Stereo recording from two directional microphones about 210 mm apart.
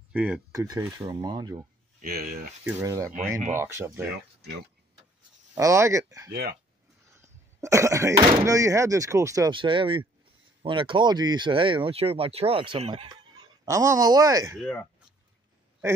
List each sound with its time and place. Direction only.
0.1 s speech: 5° right (ahead or behind)
0.5 s speech: 15° right (ahead or behind)
2.0 s speech: 45° right (ahead or behind)
2.6 s speech: 10° right (ahead or behind)
5.5 s speech: 15° right (ahead or behind)
14.6 s speech: 5° left (ahead or behind)